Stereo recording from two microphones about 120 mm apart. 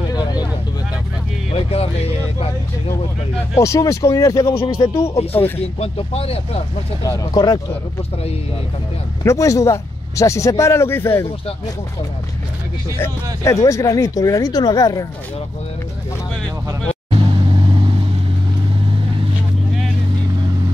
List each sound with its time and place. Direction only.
0.1 s vehicle: 35° left (ahead or behind)
1.5 s music: 55° left (ahead or behind)
3.5 s speech: 25° left (ahead or behind)
5.6 s speech: 55° left (ahead or behind)
7.0 s speech: 30° left (ahead or behind)
9.2 s speech: 25° left (ahead or behind)
13.0 s speech: 25° left (ahead or behind)
17.1 s vehicle: 50° right (ahead or behind)